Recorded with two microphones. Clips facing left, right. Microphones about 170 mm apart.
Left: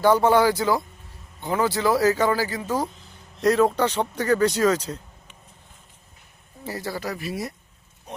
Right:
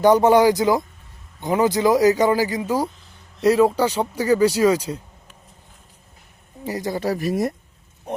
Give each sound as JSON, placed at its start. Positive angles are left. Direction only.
{"t": 0.0, "sound": "speech", "side_deg": -15}
{"t": 6.7, "sound": "speech", "side_deg": -15}
{"t": 7.2, "sound": "speech", "side_deg": -45}
{"t": 8.1, "sound": "pig", "side_deg": -55}